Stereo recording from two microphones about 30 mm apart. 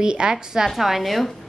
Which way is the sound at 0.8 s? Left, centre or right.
Centre.